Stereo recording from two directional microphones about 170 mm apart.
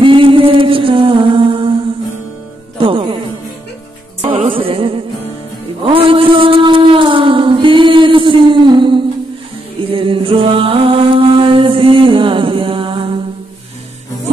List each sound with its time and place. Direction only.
0.0 s music: 30° right (ahead or behind)
2.8 s music: 30° right (ahead or behind)
4.2 s music: 30° right (ahead or behind)
5.9 s a sound: 30° right (ahead or behind)
9.9 s mantra: 30° right (ahead or behind)